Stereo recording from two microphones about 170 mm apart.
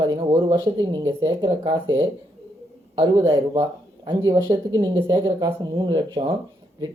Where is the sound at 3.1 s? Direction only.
20° right (ahead or behind).